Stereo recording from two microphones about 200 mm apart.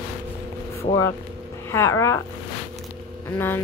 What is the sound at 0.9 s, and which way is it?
Speech, 35° left (ahead or behind).